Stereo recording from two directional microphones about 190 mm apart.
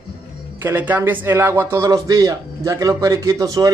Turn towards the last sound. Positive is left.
turn(degrees=-20)  # may be behind; listen again after turning